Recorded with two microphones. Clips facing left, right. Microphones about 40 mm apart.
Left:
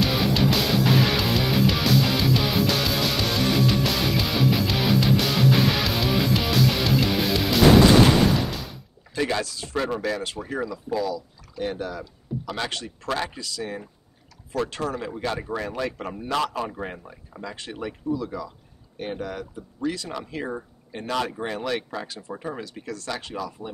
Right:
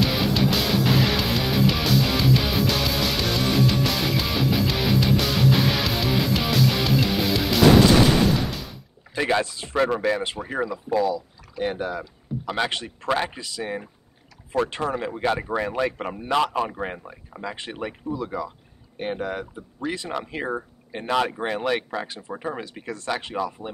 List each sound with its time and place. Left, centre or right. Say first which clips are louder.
0.3 s music: even; centre
8.5 s door: even; centre
9.1 s speech: right 3 dB; right